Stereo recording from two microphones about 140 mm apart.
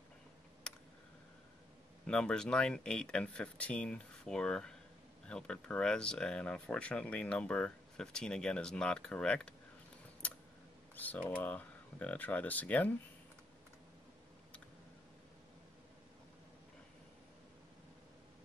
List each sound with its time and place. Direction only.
0.7 s computer keyboard: 5° left (ahead or behind)
2.0 s speech: 5° left (ahead or behind)
11.0 s speech: 10° left (ahead or behind)